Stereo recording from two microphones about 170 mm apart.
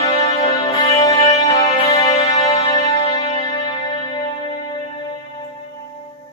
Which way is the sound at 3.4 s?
25° left (ahead or behind).